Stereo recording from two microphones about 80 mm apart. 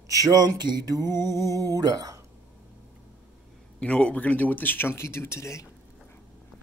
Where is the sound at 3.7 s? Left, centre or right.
Centre; by 5.6 s left.